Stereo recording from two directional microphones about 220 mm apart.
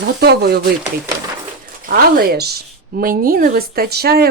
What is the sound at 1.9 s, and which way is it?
Speech, 45° right (ahead or behind).